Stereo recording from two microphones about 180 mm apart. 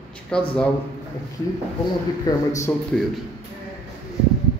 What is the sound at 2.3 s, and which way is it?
Speech, 20° left (ahead or behind).